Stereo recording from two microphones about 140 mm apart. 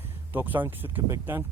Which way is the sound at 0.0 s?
15° right (ahead or behind).